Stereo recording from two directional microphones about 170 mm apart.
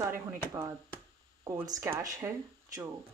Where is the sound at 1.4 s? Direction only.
20° right (ahead or behind).